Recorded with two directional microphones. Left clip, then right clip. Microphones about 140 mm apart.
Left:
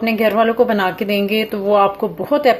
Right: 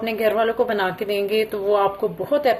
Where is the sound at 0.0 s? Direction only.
35° left (ahead or behind).